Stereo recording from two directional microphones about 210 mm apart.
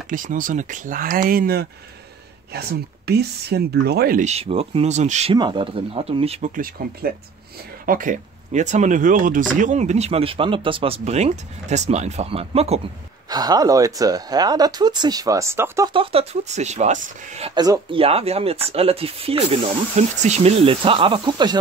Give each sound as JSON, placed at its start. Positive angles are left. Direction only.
{"t": 0.1, "sound": "speech", "side_deg": -40}
{"t": 13.3, "sound": "speech", "side_deg": -20}
{"t": 15.9, "sound": "speech", "side_deg": -25}